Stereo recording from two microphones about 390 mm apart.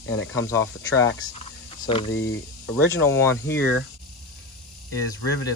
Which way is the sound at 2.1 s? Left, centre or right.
Left.